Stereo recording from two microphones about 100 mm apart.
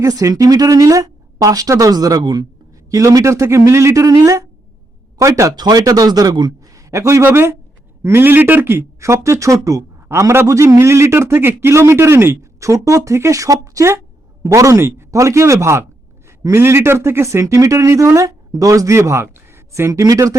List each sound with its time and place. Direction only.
0.0 s speech: 35° right (ahead or behind)
2.9 s speech: 35° right (ahead or behind)
6.7 s a man's voice: 30° right (ahead or behind)